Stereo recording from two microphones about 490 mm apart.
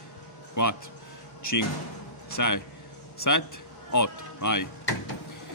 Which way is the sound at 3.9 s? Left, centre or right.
Left.